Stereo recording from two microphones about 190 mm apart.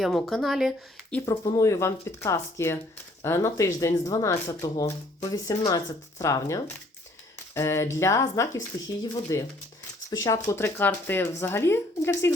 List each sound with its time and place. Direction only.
0.0 s speech: centre (ahead or behind)
1.1 s speech: 15° left (ahead or behind)